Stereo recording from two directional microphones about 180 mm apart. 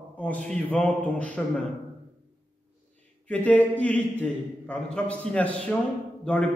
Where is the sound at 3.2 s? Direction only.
10° left (ahead or behind).